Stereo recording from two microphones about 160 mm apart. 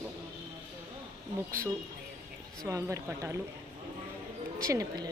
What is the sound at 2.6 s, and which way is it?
Speech, 20° right (ahead or behind).